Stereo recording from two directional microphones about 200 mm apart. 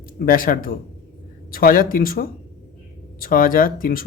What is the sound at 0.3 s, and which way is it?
A man's voice, 45° left (ahead or behind).